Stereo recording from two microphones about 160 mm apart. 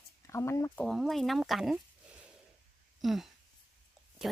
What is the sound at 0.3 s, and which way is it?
Speech, 15° left (ahead or behind).